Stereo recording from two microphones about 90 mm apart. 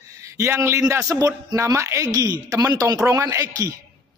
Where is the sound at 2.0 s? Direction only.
45° right (ahead or behind).